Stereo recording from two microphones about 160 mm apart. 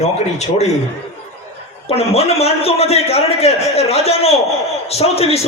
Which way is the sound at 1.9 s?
40° left (ahead or behind).